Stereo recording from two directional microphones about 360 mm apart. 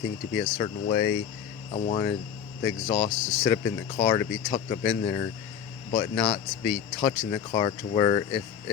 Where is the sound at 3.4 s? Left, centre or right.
Centre.